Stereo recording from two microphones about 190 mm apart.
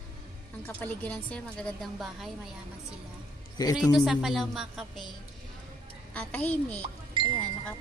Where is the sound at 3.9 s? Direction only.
Centre (ahead or behind).